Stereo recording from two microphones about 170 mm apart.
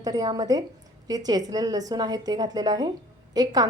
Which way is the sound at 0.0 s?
20° right (ahead or behind).